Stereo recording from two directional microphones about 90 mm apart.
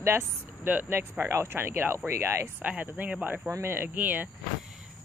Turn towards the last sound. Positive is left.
turn(degrees=-20)  # may be behind; listen again after turning